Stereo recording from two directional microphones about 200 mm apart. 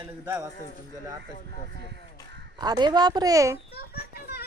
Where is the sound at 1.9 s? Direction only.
60° right (ahead or behind).